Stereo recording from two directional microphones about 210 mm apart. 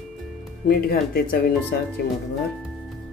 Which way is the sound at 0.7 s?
45° left (ahead or behind).